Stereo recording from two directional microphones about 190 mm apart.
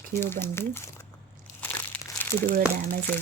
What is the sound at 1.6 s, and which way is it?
Crushing, 10° left (ahead or behind).